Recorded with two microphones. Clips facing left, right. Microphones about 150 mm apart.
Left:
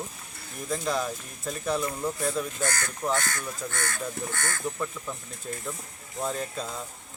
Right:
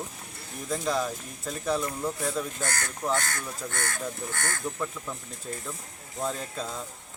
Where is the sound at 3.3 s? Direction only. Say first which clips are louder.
Left 1 dB; 50° right (ahead or behind).